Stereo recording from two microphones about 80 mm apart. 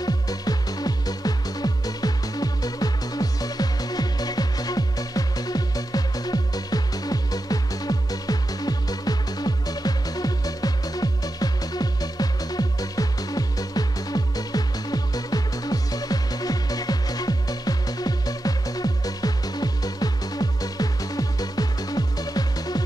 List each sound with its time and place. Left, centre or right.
0.0 s music: left